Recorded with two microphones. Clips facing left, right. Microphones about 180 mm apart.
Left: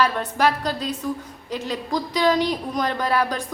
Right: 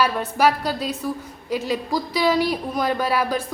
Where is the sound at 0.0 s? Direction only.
10° right (ahead or behind).